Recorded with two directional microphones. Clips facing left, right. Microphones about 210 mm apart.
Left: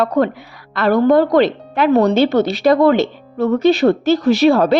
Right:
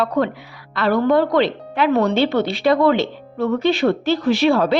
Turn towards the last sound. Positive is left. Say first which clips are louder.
# left 4 dB
turn(degrees=45)  # may be behind; listen again after turning